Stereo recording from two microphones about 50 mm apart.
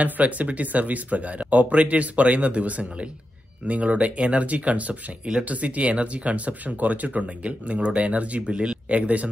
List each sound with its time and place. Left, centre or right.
0.0 s speech: right